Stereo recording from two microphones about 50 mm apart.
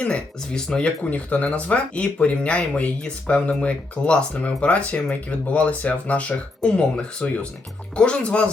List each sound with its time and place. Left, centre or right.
0.5 s speech: centre